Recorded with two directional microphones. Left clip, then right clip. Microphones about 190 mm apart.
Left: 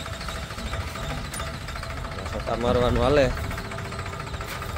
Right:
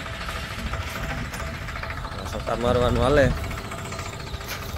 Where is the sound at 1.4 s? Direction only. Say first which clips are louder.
Right 1 dB; 55° left (ahead or behind).